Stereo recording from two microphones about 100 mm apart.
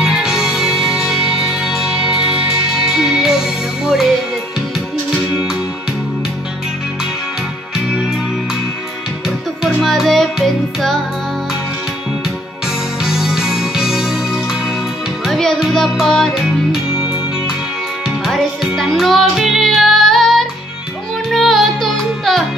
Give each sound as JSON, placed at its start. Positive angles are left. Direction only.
{"t": 0.0, "sound": "music", "side_deg": -5}
{"t": 9.8, "sound": "music", "side_deg": 0}
{"t": 13.0, "sound": "music", "side_deg": -5}
{"t": 18.2, "sound": "music", "side_deg": 0}